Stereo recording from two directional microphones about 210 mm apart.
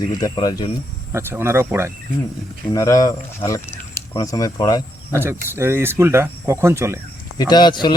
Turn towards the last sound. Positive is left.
turn(degrees=20)  # may be behind; listen again after turning